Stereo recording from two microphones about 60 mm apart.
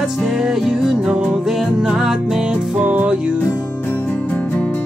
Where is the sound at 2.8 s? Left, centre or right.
Right.